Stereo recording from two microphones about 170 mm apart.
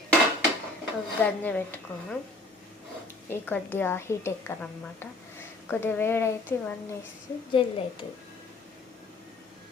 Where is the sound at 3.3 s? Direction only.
10° left (ahead or behind).